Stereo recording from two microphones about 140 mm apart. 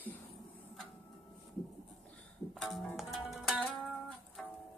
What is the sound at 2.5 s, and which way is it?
Music, centre (ahead or behind).